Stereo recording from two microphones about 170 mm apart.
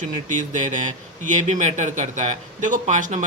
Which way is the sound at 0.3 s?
50° right (ahead or behind).